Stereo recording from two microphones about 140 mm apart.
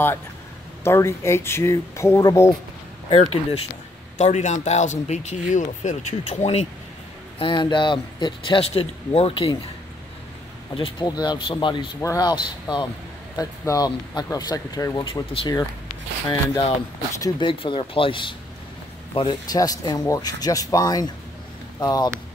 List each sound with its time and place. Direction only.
0.8 s speech: 20° left (ahead or behind)
3.1 s speech: 45° left (ahead or behind)
4.2 s speech: 55° left (ahead or behind)
7.3 s speech: 35° left (ahead or behind)
10.7 s speech: 35° left (ahead or behind)
12.0 s speech: 25° left (ahead or behind)